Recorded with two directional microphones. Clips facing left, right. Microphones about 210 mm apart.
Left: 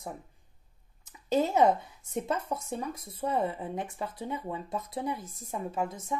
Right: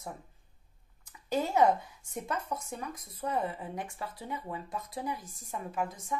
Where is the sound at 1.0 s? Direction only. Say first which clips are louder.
Left 4 dB; 20° left (ahead or behind).